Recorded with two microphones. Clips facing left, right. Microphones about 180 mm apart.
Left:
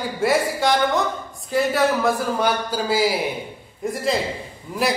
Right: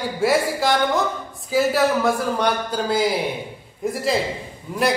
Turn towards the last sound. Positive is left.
turn(degrees=0)  # may be behind; listen again after turning